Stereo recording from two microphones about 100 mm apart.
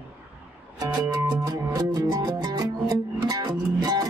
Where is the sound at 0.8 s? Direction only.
40° right (ahead or behind).